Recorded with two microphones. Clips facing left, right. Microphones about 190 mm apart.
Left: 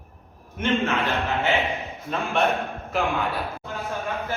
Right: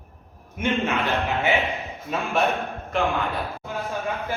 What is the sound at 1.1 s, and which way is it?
Speech, 15° right (ahead or behind).